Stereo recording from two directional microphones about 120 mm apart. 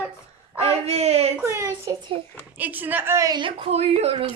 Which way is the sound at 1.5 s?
25° right (ahead or behind).